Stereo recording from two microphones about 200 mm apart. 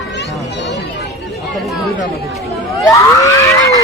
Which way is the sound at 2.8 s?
15° left (ahead or behind).